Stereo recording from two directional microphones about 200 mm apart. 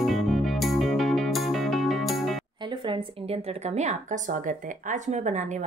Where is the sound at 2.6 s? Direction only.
25° right (ahead or behind).